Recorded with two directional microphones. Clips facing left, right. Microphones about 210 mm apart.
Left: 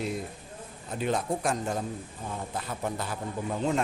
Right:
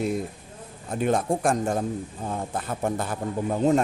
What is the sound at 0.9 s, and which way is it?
A man's voice, 50° right (ahead or behind).